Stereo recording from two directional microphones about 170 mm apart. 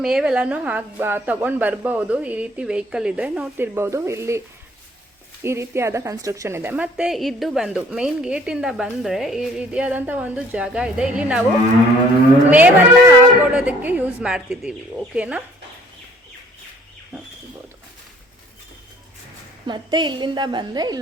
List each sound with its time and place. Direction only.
0.0 s a woman's voice: 5° right (ahead or behind)
12.5 s a woman's voice: 10° right (ahead or behind)
19.6 s a woman's voice: 25° right (ahead or behind)